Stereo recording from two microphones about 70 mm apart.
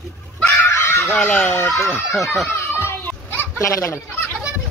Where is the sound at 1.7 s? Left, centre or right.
Left.